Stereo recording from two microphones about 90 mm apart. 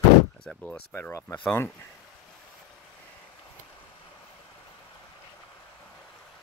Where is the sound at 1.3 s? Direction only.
20° left (ahead or behind).